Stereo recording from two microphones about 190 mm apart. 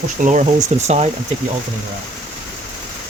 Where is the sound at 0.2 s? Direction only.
40° right (ahead or behind).